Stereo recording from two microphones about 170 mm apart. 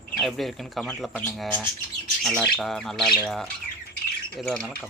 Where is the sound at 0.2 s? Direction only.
Centre (ahead or behind).